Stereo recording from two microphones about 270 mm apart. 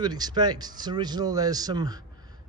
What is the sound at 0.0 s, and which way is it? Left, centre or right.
Speech, centre.